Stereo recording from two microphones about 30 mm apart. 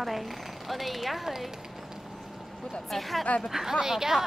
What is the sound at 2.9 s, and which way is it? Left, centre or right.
Speech, centre.